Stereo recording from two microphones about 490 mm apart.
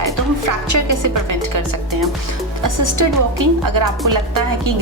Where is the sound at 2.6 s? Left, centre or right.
Right.